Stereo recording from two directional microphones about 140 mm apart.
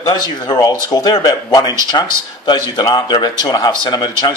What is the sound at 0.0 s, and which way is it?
Speech, 30° left (ahead or behind).